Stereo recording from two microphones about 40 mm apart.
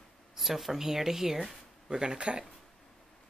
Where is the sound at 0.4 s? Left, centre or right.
Centre.